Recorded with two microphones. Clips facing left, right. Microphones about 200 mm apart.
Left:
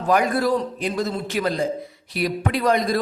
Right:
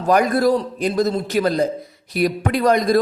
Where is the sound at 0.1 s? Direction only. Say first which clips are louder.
Right 4 dB; 40° right (ahead or behind).